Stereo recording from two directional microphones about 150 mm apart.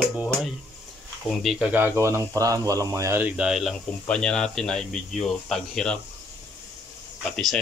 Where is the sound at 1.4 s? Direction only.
Centre (ahead or behind).